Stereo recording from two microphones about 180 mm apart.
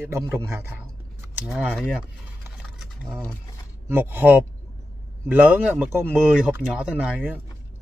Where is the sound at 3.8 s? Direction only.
10° right (ahead or behind).